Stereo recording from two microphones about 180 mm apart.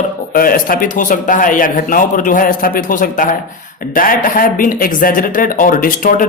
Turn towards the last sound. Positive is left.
turn(degrees=50)  # may be behind; listen again after turning